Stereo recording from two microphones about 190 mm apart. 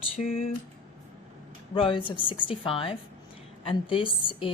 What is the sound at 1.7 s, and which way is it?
Speech, 25° left (ahead or behind).